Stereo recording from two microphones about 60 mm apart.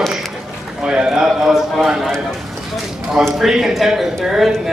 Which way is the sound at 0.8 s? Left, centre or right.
Centre.